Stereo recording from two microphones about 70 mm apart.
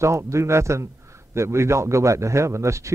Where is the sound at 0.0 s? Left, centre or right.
Right.